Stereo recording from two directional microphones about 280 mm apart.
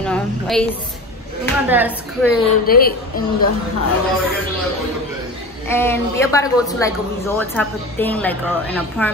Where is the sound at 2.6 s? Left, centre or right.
Left.